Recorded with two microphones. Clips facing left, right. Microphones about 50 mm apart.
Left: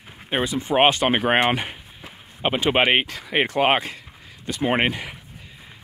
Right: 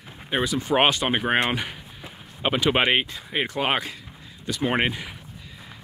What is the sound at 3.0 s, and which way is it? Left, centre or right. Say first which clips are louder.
Speech: left 5 dB; left.